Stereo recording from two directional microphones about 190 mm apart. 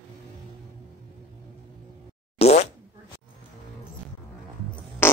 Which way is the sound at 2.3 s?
35° left (ahead or behind).